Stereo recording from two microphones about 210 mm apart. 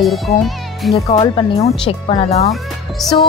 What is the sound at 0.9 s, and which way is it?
Speech, 25° left (ahead or behind).